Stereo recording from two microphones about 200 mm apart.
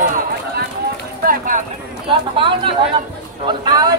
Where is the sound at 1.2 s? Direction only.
40° right (ahead or behind).